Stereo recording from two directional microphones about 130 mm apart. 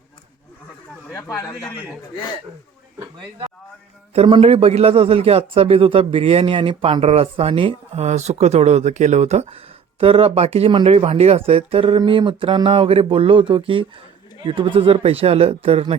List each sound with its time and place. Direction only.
1.1 s speech: 25° left (ahead or behind)
4.1 s a man's voice: 45° right (ahead or behind)
8.0 s speech: 60° right (ahead or behind)
10.7 s speech: 40° right (ahead or behind)
10.9 s a man's voice: 50° right (ahead or behind)